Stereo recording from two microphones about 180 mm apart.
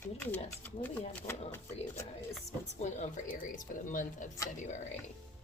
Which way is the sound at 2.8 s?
40° left (ahead or behind).